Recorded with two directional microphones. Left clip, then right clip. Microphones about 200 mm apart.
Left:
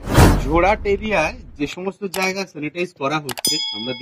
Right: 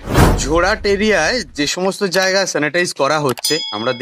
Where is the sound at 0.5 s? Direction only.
55° right (ahead or behind).